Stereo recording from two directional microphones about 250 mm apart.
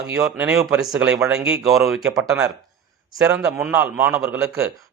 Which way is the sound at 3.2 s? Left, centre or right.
Centre.